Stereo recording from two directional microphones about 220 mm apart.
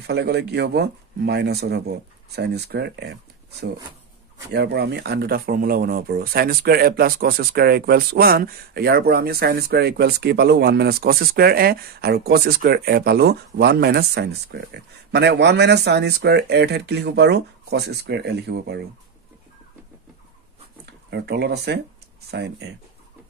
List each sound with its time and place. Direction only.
0.0 s speech: 50° right (ahead or behind)
4.5 s speech: 50° right (ahead or behind)
20.8 s speech: 50° right (ahead or behind)